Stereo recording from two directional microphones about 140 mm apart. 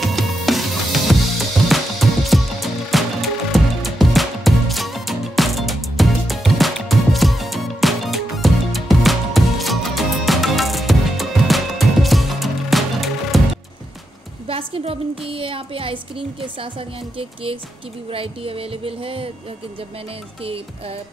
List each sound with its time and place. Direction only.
0.0 s music: centre (ahead or behind)
14.5 s a sound: 40° right (ahead or behind)
17.2 s speech: 40° right (ahead or behind)